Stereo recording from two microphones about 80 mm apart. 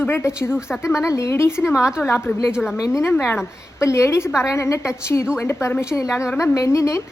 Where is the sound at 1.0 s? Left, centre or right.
Left.